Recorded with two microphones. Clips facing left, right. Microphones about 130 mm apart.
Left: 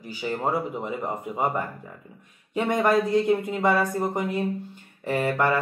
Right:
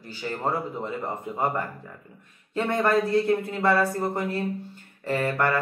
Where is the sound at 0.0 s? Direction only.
10° left (ahead or behind).